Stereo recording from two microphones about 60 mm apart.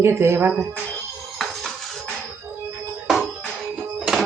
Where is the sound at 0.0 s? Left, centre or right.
Right.